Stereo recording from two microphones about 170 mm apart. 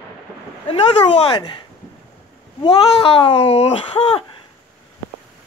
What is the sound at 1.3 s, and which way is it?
Speech, 25° left (ahead or behind).